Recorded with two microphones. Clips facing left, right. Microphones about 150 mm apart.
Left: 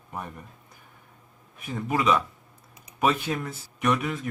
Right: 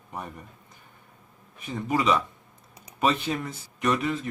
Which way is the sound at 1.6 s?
Centre (ahead or behind).